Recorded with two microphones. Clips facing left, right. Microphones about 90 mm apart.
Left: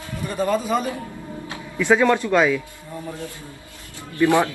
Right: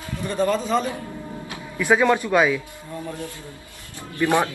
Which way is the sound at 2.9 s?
20° left (ahead or behind).